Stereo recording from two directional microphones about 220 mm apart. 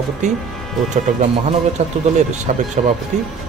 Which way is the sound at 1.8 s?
30° right (ahead or behind).